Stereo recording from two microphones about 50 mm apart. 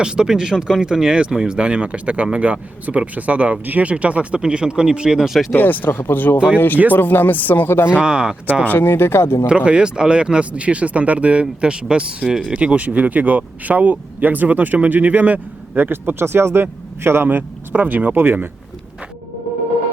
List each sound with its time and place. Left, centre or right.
0.0 s speech: centre
5.5 s speech: left
7.9 s speech: centre
8.6 s speech: left
9.5 s speech: right
15.9 s speech: right
17.2 s speech: right